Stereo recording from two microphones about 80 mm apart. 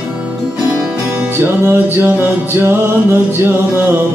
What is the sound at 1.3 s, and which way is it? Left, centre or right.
Music, right.